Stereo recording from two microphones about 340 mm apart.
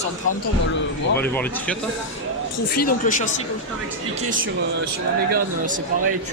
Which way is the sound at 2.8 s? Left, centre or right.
Left.